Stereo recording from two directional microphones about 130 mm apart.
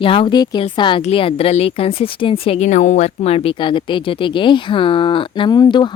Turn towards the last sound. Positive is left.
turn(degrees=35)  # may be behind; listen again after turning